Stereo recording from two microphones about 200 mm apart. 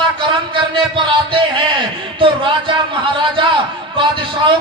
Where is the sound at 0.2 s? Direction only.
25° right (ahead or behind).